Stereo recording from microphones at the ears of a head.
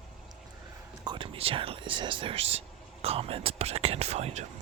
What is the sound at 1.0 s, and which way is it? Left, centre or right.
Speech, right.